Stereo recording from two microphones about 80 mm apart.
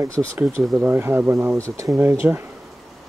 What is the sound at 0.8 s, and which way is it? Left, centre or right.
Speech, right.